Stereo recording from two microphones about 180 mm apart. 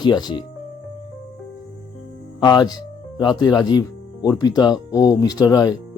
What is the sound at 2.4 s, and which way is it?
Speech, 20° left (ahead or behind).